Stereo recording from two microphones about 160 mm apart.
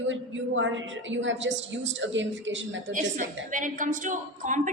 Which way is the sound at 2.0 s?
90° right.